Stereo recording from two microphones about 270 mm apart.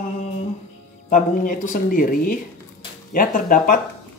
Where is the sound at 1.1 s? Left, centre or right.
Left.